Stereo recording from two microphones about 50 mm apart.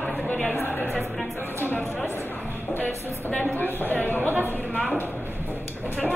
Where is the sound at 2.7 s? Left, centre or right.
Left.